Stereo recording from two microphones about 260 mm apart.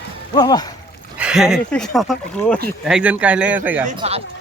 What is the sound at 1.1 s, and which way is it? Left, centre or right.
Speech, centre.